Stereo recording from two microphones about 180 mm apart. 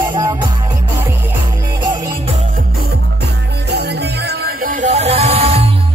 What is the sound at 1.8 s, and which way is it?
Music, 20° right (ahead or behind).